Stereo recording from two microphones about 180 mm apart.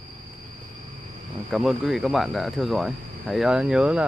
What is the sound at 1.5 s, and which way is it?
Speech, 5° right (ahead or behind).